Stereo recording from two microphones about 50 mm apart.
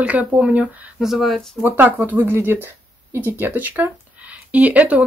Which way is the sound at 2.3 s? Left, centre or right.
Right.